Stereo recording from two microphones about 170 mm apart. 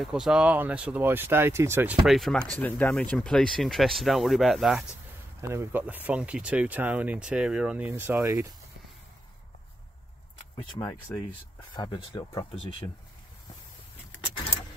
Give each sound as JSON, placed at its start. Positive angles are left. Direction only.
{"t": 0.0, "sound": "speech", "side_deg": -5}
{"t": 2.0, "sound": "speech", "side_deg": 0}
{"t": 5.4, "sound": "speech", "side_deg": -15}
{"t": 11.1, "sound": "speech", "side_deg": 10}
{"t": 11.7, "sound": "speech", "side_deg": 25}